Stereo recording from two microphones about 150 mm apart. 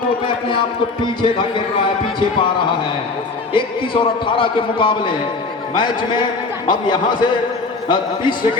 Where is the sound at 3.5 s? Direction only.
35° left (ahead or behind).